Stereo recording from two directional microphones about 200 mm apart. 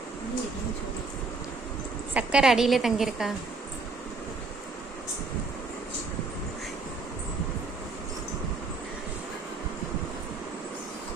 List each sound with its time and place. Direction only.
2.1 s a woman's voice: 5° right (ahead or behind)